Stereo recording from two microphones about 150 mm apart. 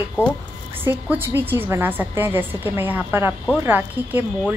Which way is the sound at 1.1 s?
15° right (ahead or behind).